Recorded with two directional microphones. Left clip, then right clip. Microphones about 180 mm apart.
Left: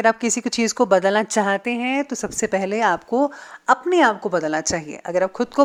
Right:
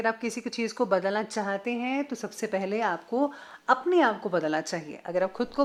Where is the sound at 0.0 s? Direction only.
35° left (ahead or behind).